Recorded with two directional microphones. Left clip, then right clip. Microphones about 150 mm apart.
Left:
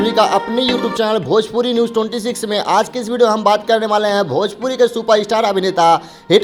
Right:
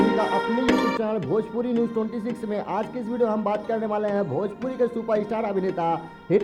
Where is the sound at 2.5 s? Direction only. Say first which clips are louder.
Left 14 dB; 20° left (ahead or behind).